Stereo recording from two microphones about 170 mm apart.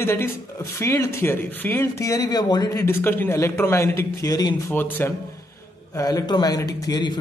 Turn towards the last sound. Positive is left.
turn(degrees=25)  # may be behind; listen again after turning